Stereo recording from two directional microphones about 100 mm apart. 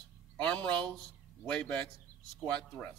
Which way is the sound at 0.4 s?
10° left (ahead or behind).